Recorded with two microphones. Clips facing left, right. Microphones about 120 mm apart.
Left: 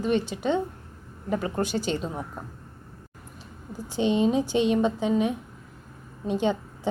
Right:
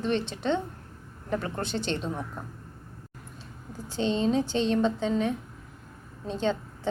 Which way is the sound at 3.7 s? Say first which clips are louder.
Left 4 dB; 15° left (ahead or behind).